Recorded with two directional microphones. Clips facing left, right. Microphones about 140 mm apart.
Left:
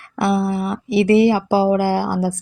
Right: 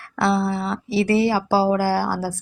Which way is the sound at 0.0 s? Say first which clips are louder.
Left 2 dB; 20° left (ahead or behind).